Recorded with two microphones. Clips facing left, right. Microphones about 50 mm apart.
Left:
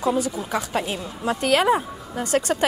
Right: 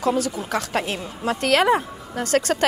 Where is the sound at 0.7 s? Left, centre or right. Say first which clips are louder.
Right 1 dB; right.